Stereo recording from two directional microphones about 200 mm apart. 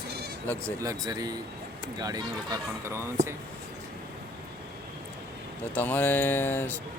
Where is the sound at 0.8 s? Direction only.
20° right (ahead or behind).